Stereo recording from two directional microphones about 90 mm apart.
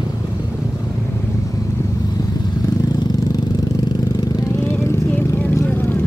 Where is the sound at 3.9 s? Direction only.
50° left (ahead or behind).